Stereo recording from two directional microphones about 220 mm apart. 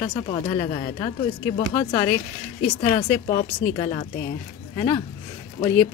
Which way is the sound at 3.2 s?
25° left (ahead or behind).